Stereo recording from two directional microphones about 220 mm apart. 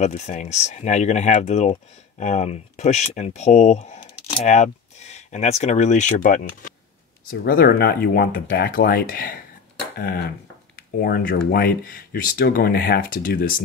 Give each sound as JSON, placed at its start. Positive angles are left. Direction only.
{"t": 0.0, "sound": "speech", "side_deg": 30}